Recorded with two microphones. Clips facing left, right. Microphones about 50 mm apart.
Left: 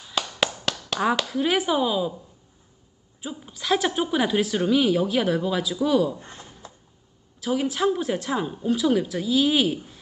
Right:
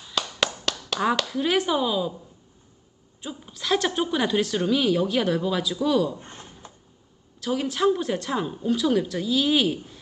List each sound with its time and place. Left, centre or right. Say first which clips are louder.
0.0 s a sound: left 1 dB; centre
3.2 s a woman's voice: left 1 dB; centre
7.4 s a woman's voice: even; centre